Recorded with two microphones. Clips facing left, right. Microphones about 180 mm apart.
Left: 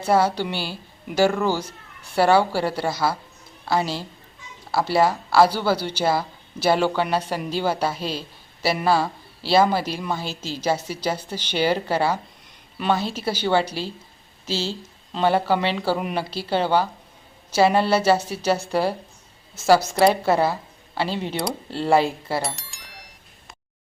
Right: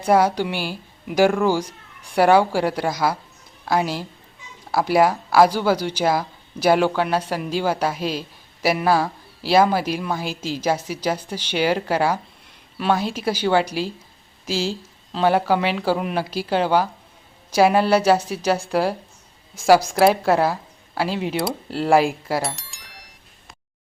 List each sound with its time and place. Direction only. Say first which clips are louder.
0.0 s speech: right 2 dB; 10° right (ahead or behind)
22.4 s bicycle bell: right 1 dB; centre (ahead or behind)